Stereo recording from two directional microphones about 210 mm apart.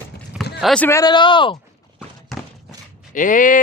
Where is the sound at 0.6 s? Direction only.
5° left (ahead or behind); by 1.5 s 25° left (ahead or behind).